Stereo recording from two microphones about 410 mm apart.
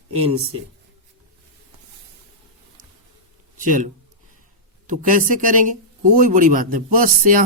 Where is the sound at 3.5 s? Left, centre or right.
Centre.